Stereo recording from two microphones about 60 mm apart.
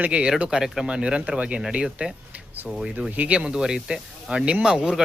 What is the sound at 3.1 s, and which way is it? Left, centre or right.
Speech, right.